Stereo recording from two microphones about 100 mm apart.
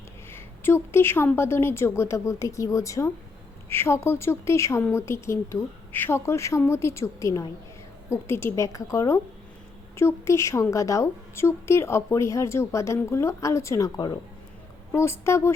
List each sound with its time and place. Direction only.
0.3 s a woman's voice: 25° left (ahead or behind); by 14.2 s 40° left (ahead or behind)
14.9 s a woman's voice: 25° left (ahead or behind)